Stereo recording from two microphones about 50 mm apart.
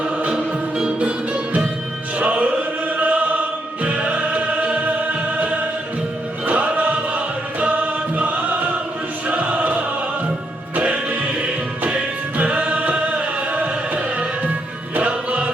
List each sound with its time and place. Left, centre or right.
0.2 s music: right
2.9 s choir: right
3.8 s music: right
6.4 s choir: right
7.6 s music: right